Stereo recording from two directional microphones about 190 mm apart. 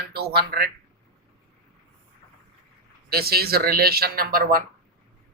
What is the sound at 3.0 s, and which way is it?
Speech, 55° right (ahead or behind).